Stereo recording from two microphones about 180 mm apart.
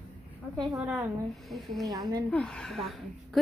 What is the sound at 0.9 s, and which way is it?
A woman's voice, centre (ahead or behind).